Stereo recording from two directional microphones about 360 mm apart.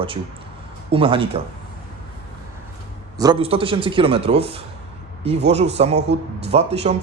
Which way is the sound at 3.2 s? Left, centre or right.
Centre.